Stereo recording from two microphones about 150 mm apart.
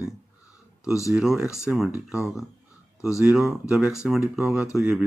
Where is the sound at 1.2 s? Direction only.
5° right (ahead or behind).